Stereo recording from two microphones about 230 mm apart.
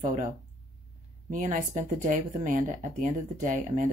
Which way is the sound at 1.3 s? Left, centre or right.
Right.